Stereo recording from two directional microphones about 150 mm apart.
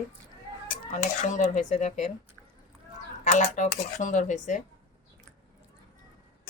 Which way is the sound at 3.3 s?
50° left (ahead or behind).